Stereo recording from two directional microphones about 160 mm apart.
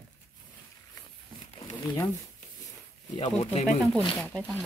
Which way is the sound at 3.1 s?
35° left (ahead or behind).